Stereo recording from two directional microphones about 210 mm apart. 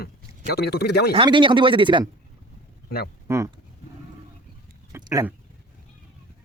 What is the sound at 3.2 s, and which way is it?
Speech, 15° right (ahead or behind).